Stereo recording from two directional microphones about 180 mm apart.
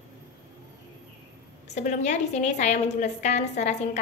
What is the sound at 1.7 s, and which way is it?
A woman's voice, 40° left (ahead or behind).